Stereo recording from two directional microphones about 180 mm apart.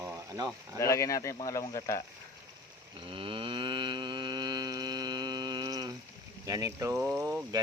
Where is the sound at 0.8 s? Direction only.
15° left (ahead or behind).